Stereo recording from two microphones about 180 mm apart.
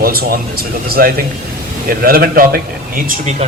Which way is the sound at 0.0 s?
55° right (ahead or behind).